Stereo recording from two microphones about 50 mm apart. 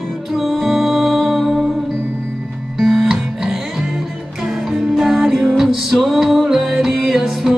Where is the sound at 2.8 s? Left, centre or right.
Centre.